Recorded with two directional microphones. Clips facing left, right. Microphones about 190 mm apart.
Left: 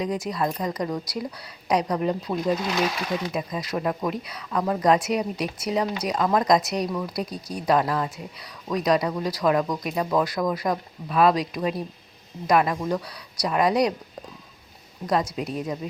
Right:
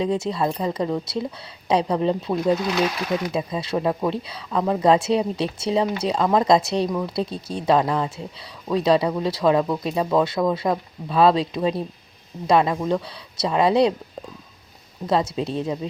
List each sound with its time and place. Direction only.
0.0 s speech: 25° right (ahead or behind)
2.7 s speech: centre (ahead or behind)
3.3 s speech: 25° right (ahead or behind)
15.0 s speech: 25° right (ahead or behind)